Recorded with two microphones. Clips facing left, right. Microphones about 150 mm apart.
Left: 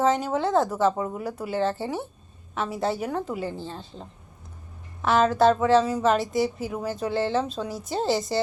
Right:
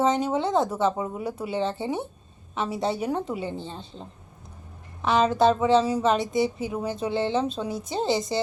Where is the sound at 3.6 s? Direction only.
Centre (ahead or behind).